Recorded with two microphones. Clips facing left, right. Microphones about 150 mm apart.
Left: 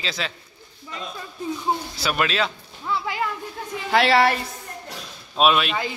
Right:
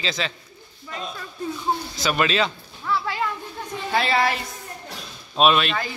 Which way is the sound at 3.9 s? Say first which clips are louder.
Left 4 dB; 80° left.